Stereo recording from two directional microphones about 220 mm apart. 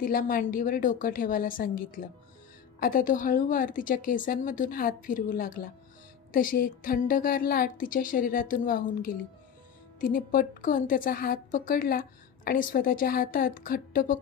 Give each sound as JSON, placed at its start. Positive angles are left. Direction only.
{"t": 0.0, "sound": "a woman's voice", "side_deg": 40}